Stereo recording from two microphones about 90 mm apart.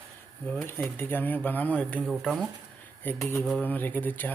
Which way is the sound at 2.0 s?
Centre (ahead or behind).